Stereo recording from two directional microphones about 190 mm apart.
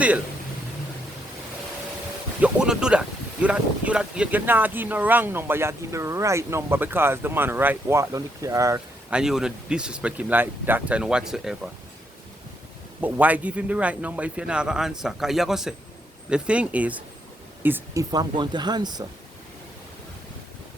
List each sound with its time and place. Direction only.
2.4 s speech: 5° right (ahead or behind)
9.1 s a man's voice: 5° right (ahead or behind)
13.0 s a man's voice: 10° right (ahead or behind)
18.1 s speech: 20° right (ahead or behind)